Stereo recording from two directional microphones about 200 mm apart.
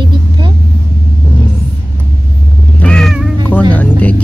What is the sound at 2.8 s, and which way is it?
Cat, 5° left (ahead or behind).